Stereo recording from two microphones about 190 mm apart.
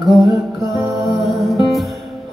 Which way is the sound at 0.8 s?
15° right (ahead or behind).